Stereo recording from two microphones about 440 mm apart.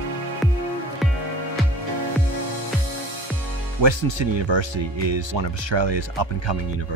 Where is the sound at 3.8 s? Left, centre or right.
Right.